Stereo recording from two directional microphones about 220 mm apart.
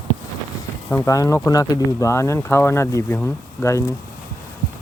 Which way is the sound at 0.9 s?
10° left (ahead or behind).